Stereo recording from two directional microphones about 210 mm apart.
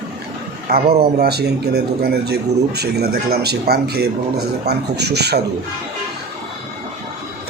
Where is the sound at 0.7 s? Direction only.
30° right (ahead or behind).